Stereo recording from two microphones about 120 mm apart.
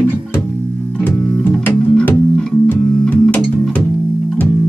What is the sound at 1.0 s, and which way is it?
Music, 15° left (ahead or behind).